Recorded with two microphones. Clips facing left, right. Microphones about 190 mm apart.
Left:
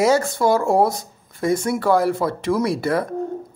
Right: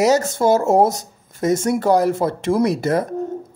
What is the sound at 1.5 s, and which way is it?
Speech, 45° right (ahead or behind).